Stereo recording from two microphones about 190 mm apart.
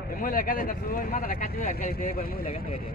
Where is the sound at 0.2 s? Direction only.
50° left (ahead or behind).